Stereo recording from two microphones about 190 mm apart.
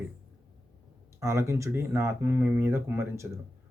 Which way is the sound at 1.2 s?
15° right (ahead or behind).